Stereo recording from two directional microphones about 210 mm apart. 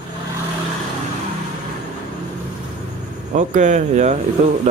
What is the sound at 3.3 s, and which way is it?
Speech, 35° right (ahead or behind).